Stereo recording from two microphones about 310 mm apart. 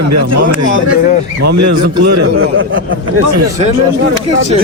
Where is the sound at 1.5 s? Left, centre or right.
Right.